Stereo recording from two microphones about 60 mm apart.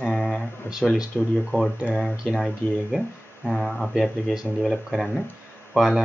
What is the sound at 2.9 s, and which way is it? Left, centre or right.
Speech, centre.